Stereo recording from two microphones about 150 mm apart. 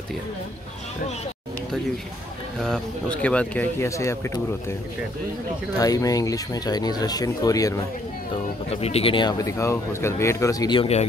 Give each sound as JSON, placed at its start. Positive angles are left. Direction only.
{"t": 2.6, "sound": "speech", "side_deg": 5}
{"t": 5.8, "sound": "speech", "side_deg": 25}
{"t": 8.6, "sound": "speech", "side_deg": 45}
{"t": 10.8, "sound": "speech", "side_deg": 45}